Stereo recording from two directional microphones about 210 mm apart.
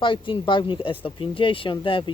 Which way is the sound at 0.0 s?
25° left (ahead or behind).